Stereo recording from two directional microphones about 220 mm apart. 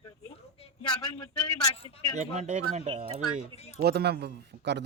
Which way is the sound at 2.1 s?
30° right (ahead or behind).